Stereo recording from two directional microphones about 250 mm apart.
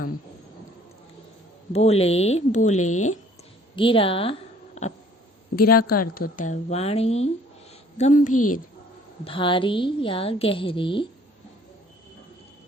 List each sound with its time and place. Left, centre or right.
1.7 s a woman's voice: left
5.9 s a woman's voice: left
8.3 s a woman's voice: left
9.2 s a woman's voice: centre